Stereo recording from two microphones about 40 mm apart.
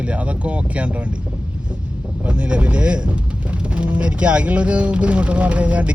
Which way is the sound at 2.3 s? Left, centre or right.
Right.